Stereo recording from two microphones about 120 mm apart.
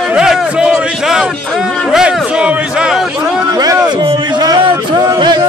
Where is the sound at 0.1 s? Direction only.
5° right (ahead or behind).